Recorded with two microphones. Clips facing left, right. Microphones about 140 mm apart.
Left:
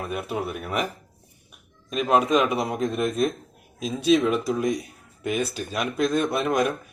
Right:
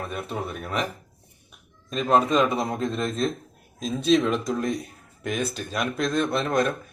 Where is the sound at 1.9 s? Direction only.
10° left (ahead or behind).